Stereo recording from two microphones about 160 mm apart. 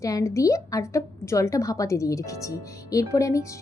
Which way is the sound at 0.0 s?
20° left (ahead or behind).